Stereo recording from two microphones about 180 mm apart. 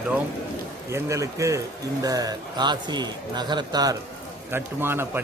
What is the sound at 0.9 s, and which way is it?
A man's voice, 15° right (ahead or behind).